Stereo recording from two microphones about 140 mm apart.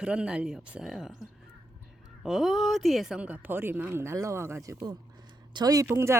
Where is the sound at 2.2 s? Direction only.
Centre (ahead or behind); by 6.2 s 20° right (ahead or behind).